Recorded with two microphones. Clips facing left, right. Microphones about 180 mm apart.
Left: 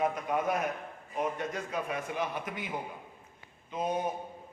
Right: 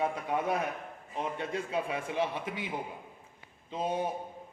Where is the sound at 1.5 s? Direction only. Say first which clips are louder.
Right 2 dB; 30° right (ahead or behind).